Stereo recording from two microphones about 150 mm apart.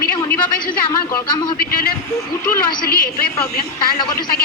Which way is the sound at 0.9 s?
25° left (ahead or behind).